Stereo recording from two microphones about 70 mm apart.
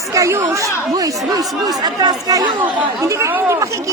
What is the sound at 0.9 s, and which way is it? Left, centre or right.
Speech, right.